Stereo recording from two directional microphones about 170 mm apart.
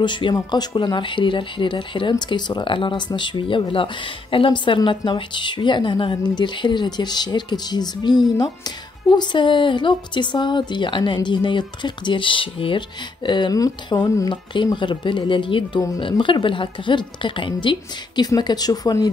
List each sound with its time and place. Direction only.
0.0 s speech: 25° left (ahead or behind)